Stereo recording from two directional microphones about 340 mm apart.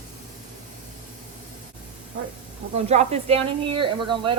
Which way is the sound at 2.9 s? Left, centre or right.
Centre.